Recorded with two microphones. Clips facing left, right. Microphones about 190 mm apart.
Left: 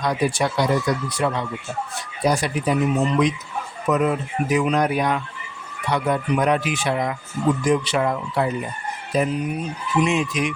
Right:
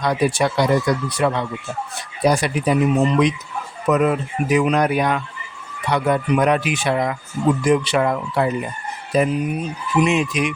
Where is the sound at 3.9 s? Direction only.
70° right (ahead or behind).